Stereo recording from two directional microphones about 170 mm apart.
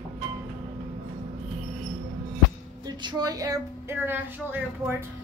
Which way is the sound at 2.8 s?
25° right (ahead or behind).